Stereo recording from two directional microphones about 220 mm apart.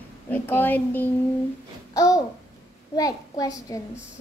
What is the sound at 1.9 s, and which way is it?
Babbling, 15° left (ahead or behind).